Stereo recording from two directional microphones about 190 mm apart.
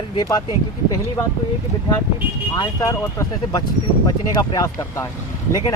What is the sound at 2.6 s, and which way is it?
Speech, 15° left (ahead or behind).